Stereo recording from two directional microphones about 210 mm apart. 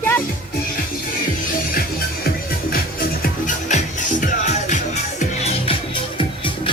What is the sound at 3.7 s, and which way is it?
Music, 35° left (ahead or behind).